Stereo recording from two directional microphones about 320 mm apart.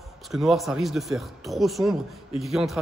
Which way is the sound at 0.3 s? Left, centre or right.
Centre.